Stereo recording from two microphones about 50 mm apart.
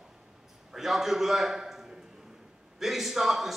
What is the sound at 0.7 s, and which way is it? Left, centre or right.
A man's voice, centre.